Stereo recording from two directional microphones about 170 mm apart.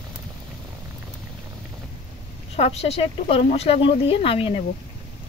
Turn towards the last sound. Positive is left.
turn(degrees=35)  # may be behind; listen again after turning